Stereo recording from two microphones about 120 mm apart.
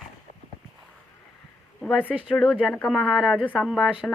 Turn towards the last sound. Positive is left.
turn(degrees=0)  # may be behind; listen again after turning